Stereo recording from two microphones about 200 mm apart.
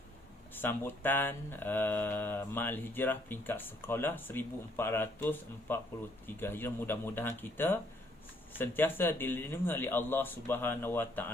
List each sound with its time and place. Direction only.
0.5 s speech: 10° left (ahead or behind)